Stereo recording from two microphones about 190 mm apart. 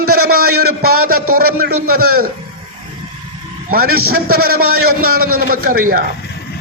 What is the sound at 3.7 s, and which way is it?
A man's voice, 50° right (ahead or behind).